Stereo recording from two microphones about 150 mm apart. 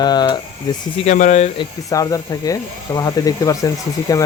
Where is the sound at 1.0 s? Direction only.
50° left (ahead or behind).